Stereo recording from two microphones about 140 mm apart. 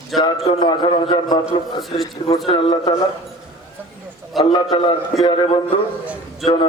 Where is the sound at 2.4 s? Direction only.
35° left (ahead or behind).